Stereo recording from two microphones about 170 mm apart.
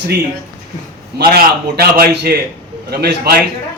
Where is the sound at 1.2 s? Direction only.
65° right (ahead or behind).